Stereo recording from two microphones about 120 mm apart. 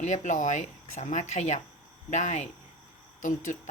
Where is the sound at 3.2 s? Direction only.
90° left.